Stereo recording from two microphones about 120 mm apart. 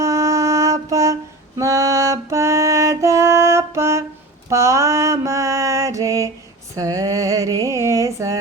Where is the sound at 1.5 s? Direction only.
25° right (ahead or behind).